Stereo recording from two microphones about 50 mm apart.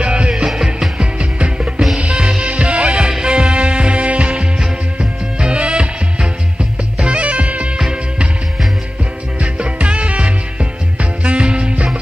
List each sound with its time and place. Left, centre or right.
0.0 s music: centre
9.4 s music: right